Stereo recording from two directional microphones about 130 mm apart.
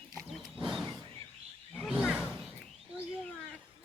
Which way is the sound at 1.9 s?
5° right (ahead or behind).